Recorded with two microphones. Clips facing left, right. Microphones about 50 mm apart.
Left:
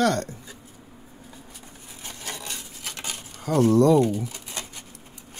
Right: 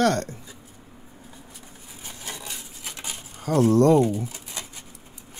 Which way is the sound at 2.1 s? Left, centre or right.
Centre.